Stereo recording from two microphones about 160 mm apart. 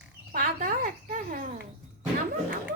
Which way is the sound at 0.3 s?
60° right (ahead or behind).